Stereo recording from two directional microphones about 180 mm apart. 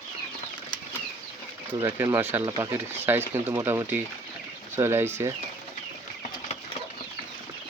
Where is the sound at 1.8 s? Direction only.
15° right (ahead or behind).